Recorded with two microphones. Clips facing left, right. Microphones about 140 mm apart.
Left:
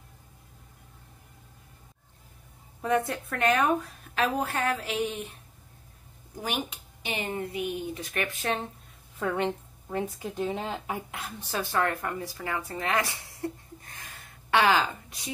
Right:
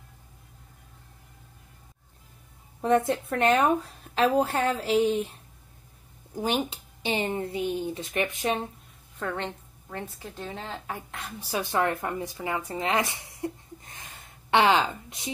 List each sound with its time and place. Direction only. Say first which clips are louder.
2.8 s a woman's voice: right 4 dB; 25° right (ahead or behind)
6.4 s a woman's voice: right 5 dB; 30° right (ahead or behind)
9.2 s speech: left 4 dB; 10° left (ahead or behind)
11.4 s speech: right 2 dB; 15° right (ahead or behind)